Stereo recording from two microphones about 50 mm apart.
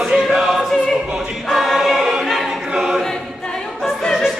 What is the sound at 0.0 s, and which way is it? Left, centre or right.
Choir, centre.